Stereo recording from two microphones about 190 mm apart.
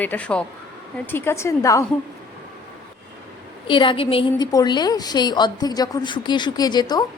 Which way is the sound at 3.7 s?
25° left (ahead or behind).